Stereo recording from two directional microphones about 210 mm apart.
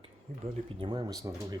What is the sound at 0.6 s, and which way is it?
Speech, 25° right (ahead or behind).